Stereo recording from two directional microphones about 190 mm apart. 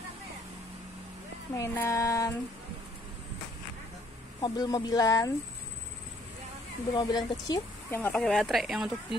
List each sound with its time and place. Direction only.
1.5 s a sound: 15° left (ahead or behind)
4.4 s speech: 20° left (ahead or behind)
6.9 s speech: 20° left (ahead or behind)
8.0 s speech: 5° left (ahead or behind)